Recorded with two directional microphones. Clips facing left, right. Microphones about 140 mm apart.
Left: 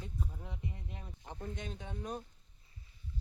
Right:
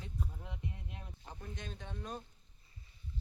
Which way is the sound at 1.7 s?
15° left (ahead or behind).